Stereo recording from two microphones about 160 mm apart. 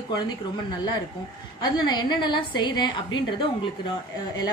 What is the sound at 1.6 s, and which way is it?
A woman's voice, 25° left (ahead or behind).